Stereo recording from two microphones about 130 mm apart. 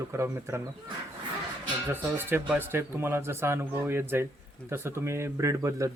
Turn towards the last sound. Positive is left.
turn(degrees=-25)  # may be behind; listen again after turning